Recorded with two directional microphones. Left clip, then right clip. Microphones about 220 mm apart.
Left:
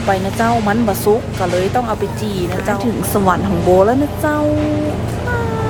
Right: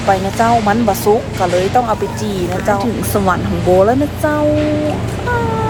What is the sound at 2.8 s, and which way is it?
Speech, 15° left (ahead or behind).